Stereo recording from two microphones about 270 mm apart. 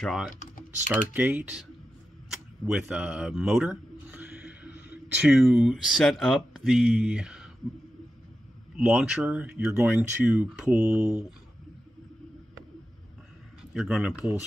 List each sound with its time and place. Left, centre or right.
0.0 s speech: centre
8.7 s speech: centre
13.7 s speech: centre